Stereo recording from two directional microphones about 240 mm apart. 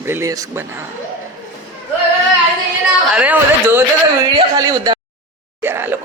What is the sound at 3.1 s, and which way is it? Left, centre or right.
Speech, centre.